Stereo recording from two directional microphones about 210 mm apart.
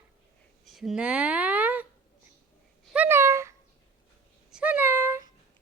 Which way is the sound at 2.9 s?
10° right (ahead or behind).